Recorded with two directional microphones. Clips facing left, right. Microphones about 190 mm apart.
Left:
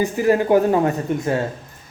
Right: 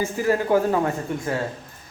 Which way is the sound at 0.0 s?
20° left (ahead or behind).